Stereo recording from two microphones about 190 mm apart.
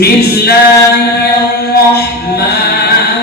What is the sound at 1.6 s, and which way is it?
Chant, 55° left (ahead or behind).